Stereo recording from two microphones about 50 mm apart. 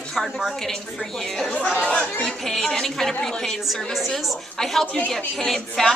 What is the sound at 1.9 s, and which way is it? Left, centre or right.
A woman's voice, centre.